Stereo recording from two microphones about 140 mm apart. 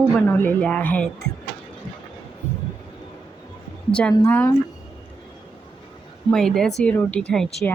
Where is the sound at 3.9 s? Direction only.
10° left (ahead or behind).